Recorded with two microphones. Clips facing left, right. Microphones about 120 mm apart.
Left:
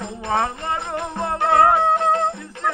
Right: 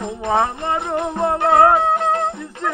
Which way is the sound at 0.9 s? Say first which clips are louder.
Right 5 dB; 20° right (ahead or behind).